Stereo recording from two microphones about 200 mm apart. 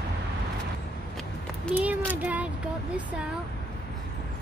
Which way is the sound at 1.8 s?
10° right (ahead or behind).